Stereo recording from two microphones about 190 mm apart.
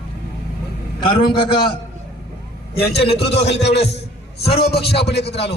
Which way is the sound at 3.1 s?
60° left (ahead or behind).